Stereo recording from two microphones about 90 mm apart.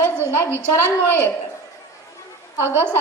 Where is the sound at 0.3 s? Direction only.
30° left (ahead or behind).